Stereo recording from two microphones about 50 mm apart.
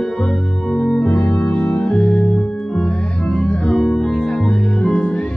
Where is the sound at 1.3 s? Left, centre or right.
Centre.